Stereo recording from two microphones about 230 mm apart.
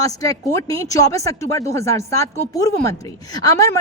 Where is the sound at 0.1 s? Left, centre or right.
Centre.